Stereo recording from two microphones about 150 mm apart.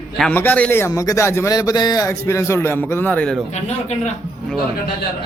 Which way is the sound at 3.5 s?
50° left (ahead or behind).